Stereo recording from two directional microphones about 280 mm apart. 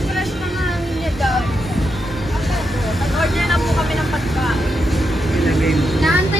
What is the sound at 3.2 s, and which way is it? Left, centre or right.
Vehicle, centre.